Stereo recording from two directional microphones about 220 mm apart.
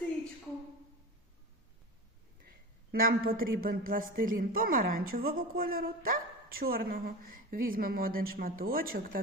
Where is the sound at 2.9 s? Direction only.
40° right (ahead or behind).